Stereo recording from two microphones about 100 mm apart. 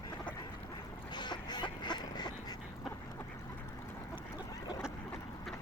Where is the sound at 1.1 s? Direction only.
50° left (ahead or behind).